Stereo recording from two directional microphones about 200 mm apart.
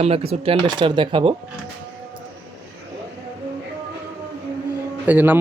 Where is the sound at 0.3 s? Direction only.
25° right (ahead or behind).